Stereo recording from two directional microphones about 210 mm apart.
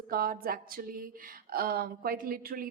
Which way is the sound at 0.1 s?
45° right (ahead or behind).